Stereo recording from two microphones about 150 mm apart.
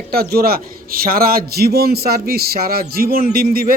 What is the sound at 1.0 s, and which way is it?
Speech, 80° right.